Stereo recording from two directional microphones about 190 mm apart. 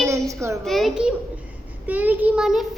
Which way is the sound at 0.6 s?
Centre (ahead or behind).